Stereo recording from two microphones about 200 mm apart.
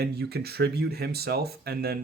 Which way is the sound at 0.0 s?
55° right (ahead or behind).